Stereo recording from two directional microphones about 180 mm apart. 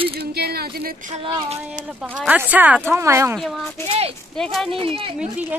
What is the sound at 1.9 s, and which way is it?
Speech, 5° right (ahead or behind).